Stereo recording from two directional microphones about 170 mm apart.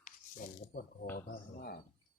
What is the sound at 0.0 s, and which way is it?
Coin, 50° left (ahead or behind).